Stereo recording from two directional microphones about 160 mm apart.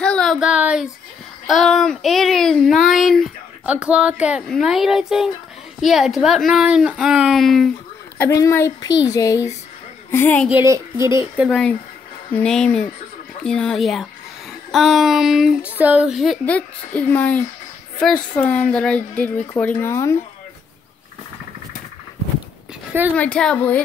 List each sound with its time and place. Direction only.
0.0 s speech: 5° left (ahead or behind)
8.2 s a woman's voice: 15° left (ahead or behind)
10.1 s a woman's voice: 10° left (ahead or behind)
10.5 s speech: 15° right (ahead or behind)
11.3 s a woman's voice: centre (ahead or behind); by 20.2 s 15° left (ahead or behind)
23.1 s a woman's voice: 5° left (ahead or behind)